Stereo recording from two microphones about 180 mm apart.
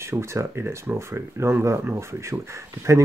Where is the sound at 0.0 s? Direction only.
15° right (ahead or behind).